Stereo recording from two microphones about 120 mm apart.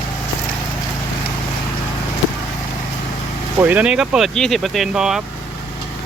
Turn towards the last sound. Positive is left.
turn(degrees=-5)  # may be behind; listen again after turning